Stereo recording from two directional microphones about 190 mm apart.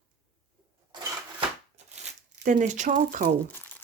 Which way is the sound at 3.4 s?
10° left (ahead or behind).